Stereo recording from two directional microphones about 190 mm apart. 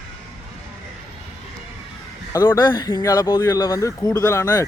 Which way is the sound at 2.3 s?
20° left (ahead or behind).